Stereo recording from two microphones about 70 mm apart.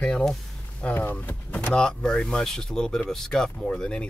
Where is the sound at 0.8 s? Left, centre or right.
Left.